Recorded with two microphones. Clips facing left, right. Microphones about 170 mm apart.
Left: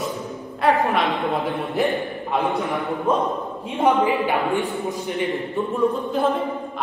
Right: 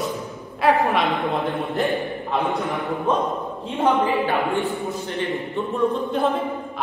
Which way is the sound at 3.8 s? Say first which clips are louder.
Left 1 dB; 20° left (ahead or behind).